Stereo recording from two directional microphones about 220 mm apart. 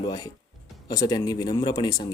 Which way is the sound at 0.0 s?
20° left (ahead or behind).